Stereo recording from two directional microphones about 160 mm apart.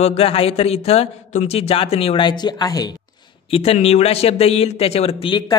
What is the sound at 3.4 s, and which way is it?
A man's voice, 40° left (ahead or behind).